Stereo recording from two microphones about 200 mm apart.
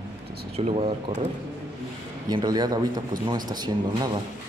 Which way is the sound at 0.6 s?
30° right (ahead or behind).